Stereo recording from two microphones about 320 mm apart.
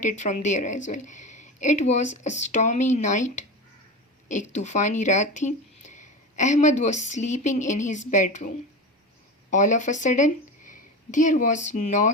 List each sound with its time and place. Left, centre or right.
0.0 s speech: left